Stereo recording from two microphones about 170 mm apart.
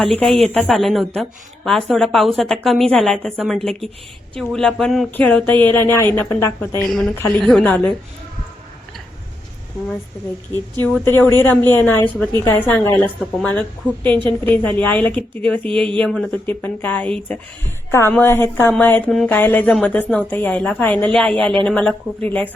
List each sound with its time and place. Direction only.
0.0 s a woman's voice: centre (ahead or behind)
6.8 s a woman's voice: centre (ahead or behind)
10.5 s speech: 10° left (ahead or behind)
15.6 s speech: 30° right (ahead or behind)
16.0 s a woman's voice: centre (ahead or behind)